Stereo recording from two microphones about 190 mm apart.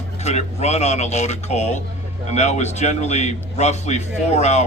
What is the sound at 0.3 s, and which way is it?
Speech, 35° left (ahead or behind).